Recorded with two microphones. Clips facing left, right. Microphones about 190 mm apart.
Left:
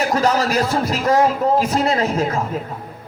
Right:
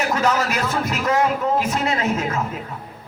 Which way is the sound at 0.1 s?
35° left (ahead or behind).